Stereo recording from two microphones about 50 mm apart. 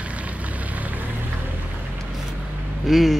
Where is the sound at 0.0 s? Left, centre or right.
Right.